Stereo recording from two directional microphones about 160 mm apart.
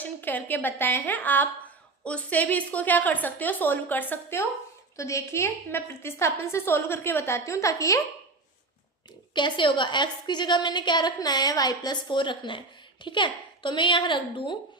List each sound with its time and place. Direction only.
0.0 s a woman's voice: 10° left (ahead or behind)
9.3 s a woman's voice: 30° left (ahead or behind)